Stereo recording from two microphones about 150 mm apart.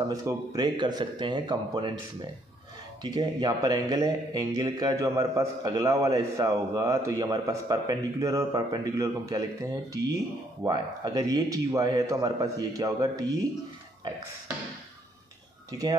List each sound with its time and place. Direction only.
0.1 s speech: 20° right (ahead or behind)
3.0 s speech: 25° right (ahead or behind)
15.7 s speech: 25° right (ahead or behind)